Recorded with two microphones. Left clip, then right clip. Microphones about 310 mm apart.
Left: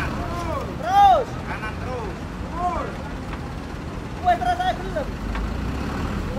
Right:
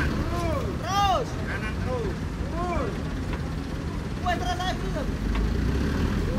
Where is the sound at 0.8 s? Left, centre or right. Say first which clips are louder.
Left 9 dB; right.